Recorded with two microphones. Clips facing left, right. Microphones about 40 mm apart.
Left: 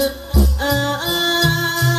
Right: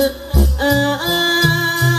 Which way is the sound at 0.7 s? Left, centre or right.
Right.